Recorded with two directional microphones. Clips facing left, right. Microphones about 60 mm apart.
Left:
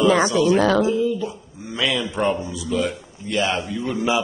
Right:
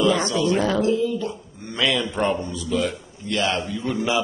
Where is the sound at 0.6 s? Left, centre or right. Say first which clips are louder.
Left 4 dB; left.